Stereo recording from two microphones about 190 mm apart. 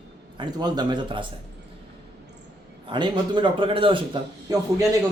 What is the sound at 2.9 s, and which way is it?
A man's voice, 25° right (ahead or behind).